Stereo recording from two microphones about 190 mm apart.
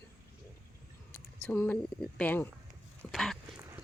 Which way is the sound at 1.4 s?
10° left (ahead or behind).